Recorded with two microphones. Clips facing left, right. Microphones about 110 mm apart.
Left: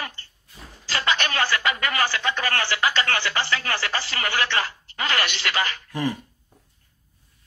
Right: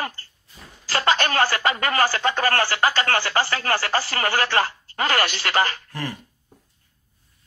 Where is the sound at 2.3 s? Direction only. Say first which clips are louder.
Right 4 dB; 40° right (ahead or behind).